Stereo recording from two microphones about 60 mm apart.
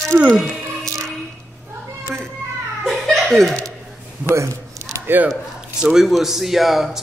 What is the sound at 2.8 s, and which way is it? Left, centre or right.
Laughter, centre.